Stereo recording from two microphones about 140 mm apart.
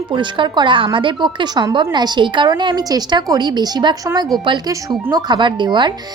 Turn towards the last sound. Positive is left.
turn(degrees=-35)  # may be behind; listen again after turning